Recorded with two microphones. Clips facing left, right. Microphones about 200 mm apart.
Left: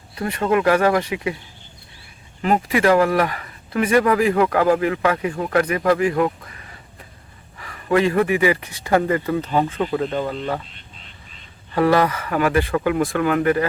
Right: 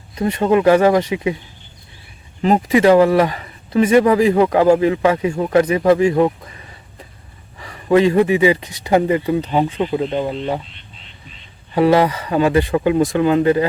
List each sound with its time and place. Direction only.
0.2 s speech: 20° right (ahead or behind)
2.4 s speech: 25° right (ahead or behind)
7.6 s speech: 20° right (ahead or behind)
11.7 s speech: 20° right (ahead or behind)